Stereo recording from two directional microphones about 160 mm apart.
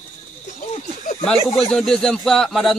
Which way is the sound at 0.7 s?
45° left (ahead or behind).